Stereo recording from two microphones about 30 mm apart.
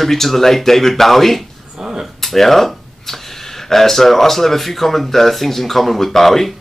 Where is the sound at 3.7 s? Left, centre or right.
Centre.